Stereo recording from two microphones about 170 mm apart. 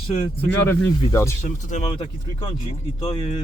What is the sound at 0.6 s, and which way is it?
Speech, 15° left (ahead or behind).